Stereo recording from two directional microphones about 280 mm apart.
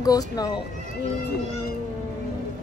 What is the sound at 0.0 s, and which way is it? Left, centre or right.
Speech, centre.